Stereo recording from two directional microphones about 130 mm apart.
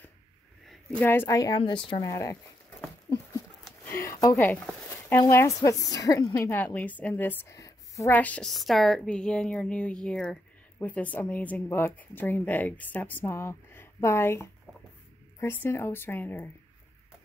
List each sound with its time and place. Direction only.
0.7 s a woman's voice: 10° left (ahead or behind); by 2.3 s 25° left (ahead or behind)
3.8 s a sound: 20° left (ahead or behind)
5.2 s a woman's voice: 25° left (ahead or behind)
6.6 s a woman's voice: 15° left (ahead or behind)
8.1 s a woman's voice: 10° left (ahead or behind)